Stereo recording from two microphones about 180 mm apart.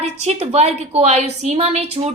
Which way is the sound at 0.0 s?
35° right (ahead or behind).